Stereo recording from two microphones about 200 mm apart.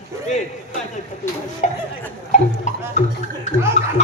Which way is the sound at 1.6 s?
35° left (ahead or behind).